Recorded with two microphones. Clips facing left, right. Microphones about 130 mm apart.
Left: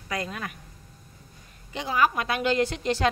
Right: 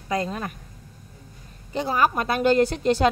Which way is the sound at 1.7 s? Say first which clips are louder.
Right 2 dB; 40° right (ahead or behind).